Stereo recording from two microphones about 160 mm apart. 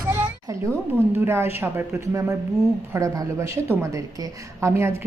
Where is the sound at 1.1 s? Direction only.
15° right (ahead or behind).